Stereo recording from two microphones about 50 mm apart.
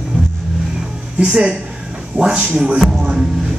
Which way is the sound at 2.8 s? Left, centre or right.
Centre.